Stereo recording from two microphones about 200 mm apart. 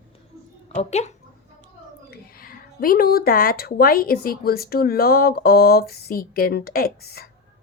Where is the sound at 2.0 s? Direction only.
50° left (ahead or behind).